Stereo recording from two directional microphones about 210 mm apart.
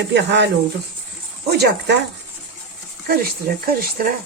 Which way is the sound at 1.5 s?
50° right (ahead or behind).